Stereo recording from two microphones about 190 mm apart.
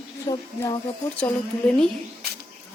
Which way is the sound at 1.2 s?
5° left (ahead or behind).